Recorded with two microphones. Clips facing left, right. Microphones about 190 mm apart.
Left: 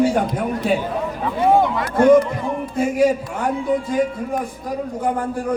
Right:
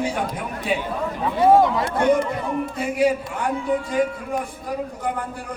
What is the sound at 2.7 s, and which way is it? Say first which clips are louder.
Speech: left 4 dB; 45° left (ahead or behind).